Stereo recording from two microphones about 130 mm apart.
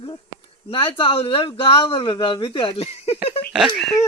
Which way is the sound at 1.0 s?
45° left (ahead or behind).